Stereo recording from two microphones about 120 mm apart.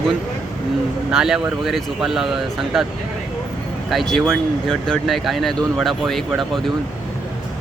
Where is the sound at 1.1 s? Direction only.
5° right (ahead or behind).